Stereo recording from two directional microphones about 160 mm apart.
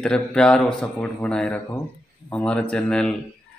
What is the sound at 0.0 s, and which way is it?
A man's voice, 5° left (ahead or behind).